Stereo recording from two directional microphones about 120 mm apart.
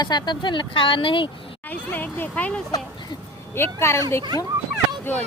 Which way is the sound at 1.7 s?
15° left (ahead or behind).